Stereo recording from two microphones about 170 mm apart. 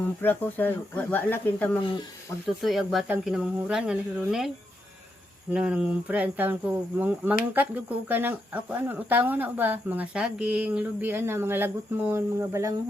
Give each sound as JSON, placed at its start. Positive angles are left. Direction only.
{"t": 0.2, "sound": "speech", "side_deg": 10}
{"t": 1.8, "sound": "speech", "side_deg": 30}
{"t": 2.6, "sound": "speech", "side_deg": 0}